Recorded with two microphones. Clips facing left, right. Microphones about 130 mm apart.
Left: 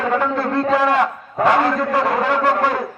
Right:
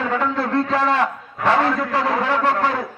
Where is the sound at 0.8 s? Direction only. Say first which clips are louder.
Left 3 dB; 10° left (ahead or behind).